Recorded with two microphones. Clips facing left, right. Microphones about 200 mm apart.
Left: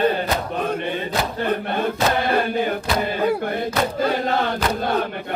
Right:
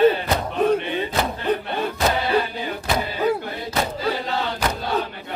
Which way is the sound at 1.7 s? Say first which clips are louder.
Left 2 dB; 50° left (ahead or behind).